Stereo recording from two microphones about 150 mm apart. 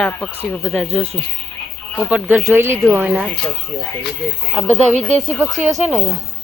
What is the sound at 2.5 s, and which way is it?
Speech, 15° right (ahead or behind).